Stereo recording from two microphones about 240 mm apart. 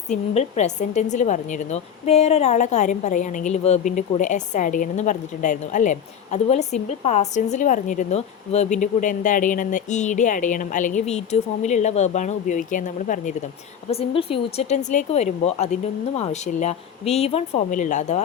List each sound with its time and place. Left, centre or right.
0.1 s a woman's voice: left